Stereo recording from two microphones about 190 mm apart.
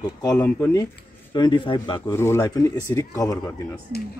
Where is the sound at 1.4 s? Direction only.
25° left (ahead or behind).